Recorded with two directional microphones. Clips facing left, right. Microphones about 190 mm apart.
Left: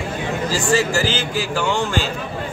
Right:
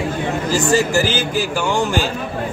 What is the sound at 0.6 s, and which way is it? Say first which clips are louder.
Speech: right 3 dB; 20° right (ahead or behind).